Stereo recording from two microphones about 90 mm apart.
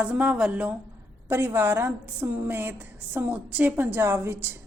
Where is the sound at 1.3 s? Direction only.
25° right (ahead or behind).